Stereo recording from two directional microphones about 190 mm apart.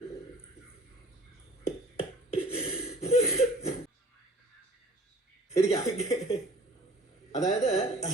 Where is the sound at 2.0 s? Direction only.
30° left (ahead or behind).